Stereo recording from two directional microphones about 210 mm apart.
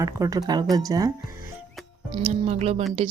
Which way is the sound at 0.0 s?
15° right (ahead or behind).